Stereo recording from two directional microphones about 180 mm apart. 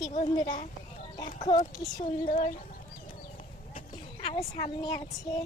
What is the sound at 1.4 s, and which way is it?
Speech, 25° left (ahead or behind).